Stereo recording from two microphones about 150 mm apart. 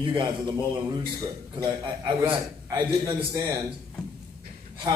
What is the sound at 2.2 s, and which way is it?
Speech, 15° right (ahead or behind).